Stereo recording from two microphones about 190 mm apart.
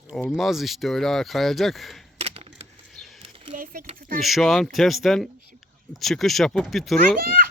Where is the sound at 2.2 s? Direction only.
30° right (ahead or behind).